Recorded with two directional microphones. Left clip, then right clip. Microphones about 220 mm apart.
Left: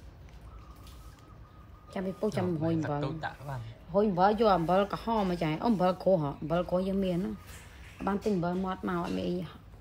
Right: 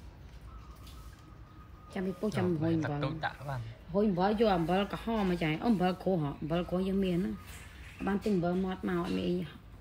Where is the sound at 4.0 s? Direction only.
45° left (ahead or behind).